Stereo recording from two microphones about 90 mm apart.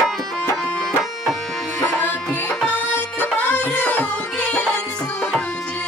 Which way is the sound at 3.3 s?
15° left (ahead or behind).